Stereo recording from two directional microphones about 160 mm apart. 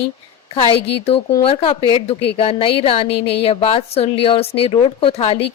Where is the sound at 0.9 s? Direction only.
35° left (ahead or behind).